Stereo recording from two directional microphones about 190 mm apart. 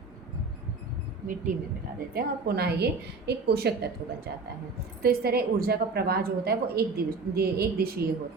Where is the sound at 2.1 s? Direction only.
55° right (ahead or behind).